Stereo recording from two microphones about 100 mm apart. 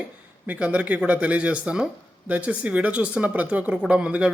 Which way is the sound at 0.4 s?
15° right (ahead or behind).